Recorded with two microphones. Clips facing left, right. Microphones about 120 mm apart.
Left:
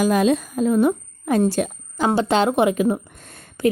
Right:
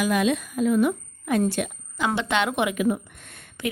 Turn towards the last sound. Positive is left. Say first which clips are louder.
# left 4 dB
turn(degrees=35)  # may be behind; listen again after turning